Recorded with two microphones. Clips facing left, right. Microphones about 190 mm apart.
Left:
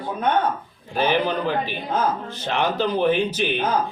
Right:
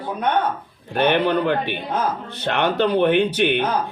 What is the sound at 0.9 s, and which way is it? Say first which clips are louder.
A man's voice: right 3 dB; 65° right (ahead or behind).